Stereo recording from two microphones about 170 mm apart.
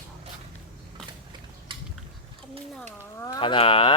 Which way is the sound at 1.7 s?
30° right (ahead or behind).